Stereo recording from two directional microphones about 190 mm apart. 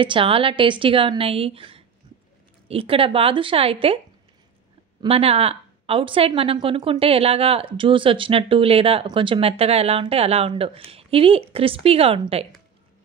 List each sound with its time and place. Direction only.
0.0 s a woman's voice: 25° right (ahead or behind)
5.0 s a woman's voice: 30° right (ahead or behind)